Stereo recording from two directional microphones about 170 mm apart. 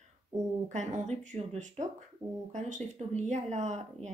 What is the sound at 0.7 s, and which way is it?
Speech, 45° right (ahead or behind).